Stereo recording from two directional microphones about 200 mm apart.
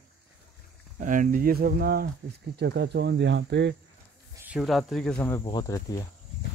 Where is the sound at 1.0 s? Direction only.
40° right (ahead or behind); by 3.8 s 60° right (ahead or behind).